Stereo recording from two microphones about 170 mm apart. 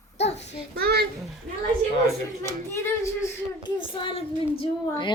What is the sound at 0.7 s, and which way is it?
Speech, 70° right (ahead or behind).